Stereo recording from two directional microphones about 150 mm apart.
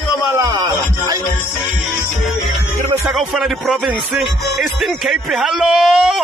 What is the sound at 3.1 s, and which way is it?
Speech, centre (ahead or behind).